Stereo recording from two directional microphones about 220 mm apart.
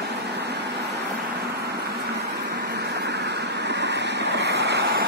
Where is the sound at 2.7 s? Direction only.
50° right (ahead or behind).